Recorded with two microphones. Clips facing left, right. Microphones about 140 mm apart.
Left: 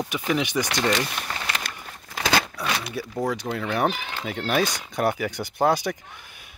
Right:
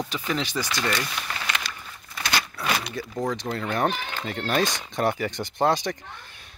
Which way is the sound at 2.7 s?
5° right (ahead or behind).